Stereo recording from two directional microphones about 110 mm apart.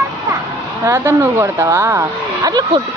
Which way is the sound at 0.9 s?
25° right (ahead or behind).